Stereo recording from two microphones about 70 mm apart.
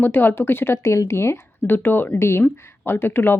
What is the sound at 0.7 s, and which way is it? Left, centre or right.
Speech, left.